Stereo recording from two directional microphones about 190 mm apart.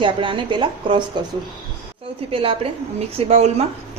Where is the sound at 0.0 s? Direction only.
25° right (ahead or behind).